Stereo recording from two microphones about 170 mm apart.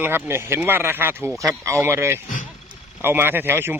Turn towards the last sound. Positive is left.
turn(degrees=-10)  # may be behind; listen again after turning